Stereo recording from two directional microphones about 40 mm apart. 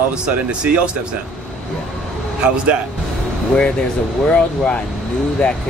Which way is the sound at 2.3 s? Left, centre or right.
Right.